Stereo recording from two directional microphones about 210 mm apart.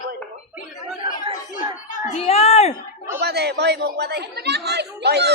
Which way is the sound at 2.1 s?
30° left (ahead or behind).